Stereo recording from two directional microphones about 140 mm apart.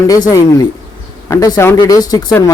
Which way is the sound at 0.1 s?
25° left (ahead or behind).